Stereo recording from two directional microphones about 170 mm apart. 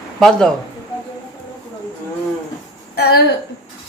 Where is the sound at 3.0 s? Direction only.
65° left (ahead or behind).